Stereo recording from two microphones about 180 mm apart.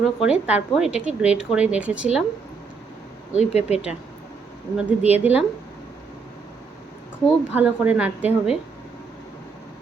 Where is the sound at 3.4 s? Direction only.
35° left (ahead or behind).